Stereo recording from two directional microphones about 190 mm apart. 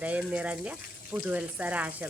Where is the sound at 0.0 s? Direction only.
5° right (ahead or behind).